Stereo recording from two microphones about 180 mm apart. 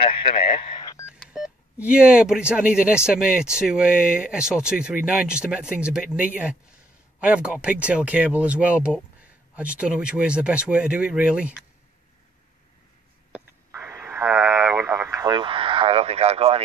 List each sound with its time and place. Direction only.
0.0 s speech: 30° left (ahead or behind)
1.3 s speech: 5° right (ahead or behind)
13.8 s radio: 15° right (ahead or behind); by 16.6 s 35° right (ahead or behind)